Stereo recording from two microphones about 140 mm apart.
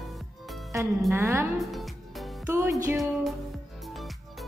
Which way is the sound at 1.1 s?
20° right (ahead or behind).